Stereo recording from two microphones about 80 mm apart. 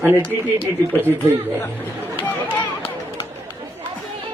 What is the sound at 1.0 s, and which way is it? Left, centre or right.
Speech, right.